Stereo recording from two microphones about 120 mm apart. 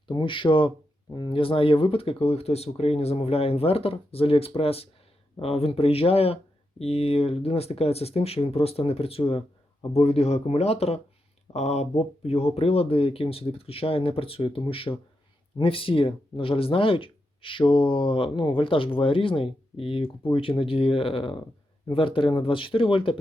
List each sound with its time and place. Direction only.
0.1 s speech: 45° left (ahead or behind)